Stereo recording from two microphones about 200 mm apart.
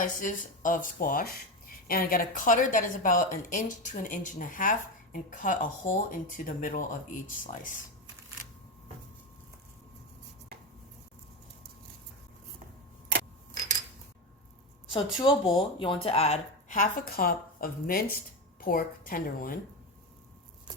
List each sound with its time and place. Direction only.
0.0 s a woman's voice: 40° left (ahead or behind)
15.2 s a woman's voice: 25° left (ahead or behind); by 19.5 s 45° left (ahead or behind)